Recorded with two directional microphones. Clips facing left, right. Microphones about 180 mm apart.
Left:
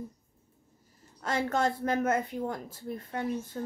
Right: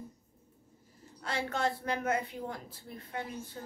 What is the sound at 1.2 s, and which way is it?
A woman's voice, 45° left (ahead or behind).